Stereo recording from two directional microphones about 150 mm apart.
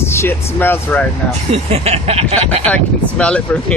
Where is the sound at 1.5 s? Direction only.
40° right (ahead or behind).